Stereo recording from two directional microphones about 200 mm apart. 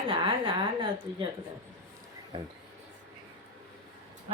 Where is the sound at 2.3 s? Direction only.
25° right (ahead or behind).